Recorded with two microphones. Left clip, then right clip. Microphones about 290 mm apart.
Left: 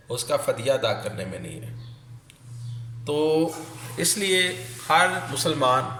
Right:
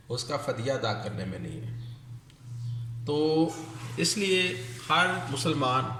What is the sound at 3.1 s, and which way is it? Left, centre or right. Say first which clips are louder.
Speech: left 4 dB; centre.